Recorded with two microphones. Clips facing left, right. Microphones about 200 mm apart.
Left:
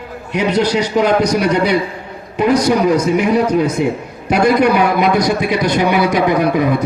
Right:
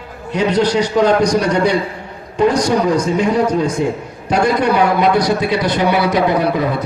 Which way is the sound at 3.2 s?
15° left (ahead or behind).